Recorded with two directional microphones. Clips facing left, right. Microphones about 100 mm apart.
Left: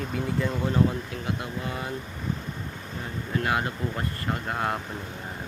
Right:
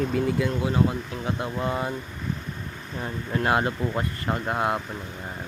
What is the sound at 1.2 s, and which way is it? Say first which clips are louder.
Speech: right 7 dB; 30° right (ahead or behind).